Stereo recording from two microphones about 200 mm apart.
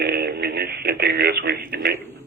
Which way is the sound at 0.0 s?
55° right (ahead or behind).